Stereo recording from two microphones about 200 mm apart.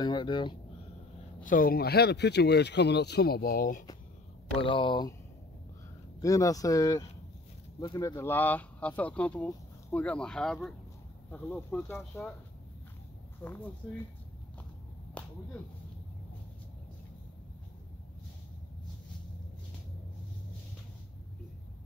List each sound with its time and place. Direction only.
0.0 s speech: 20° left (ahead or behind)
1.4 s speech: 45° left (ahead or behind)
4.6 s speech: 25° left (ahead or behind)
6.2 s speech: 15° left (ahead or behind)
13.4 s speech: 10° left (ahead or behind)
15.2 s whip: 5° left (ahead or behind)